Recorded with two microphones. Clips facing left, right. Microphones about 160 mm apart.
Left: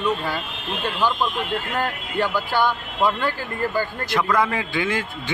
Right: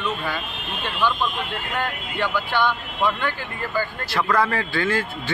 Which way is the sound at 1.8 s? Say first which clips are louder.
Left 1 dB; 40° left (ahead or behind).